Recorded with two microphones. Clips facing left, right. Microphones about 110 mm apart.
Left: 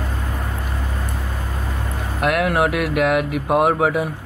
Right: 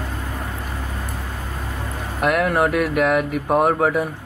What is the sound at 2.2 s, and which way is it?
Speech, 5° left (ahead or behind).